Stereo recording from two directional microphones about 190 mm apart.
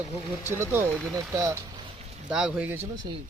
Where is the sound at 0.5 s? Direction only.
10° right (ahead or behind).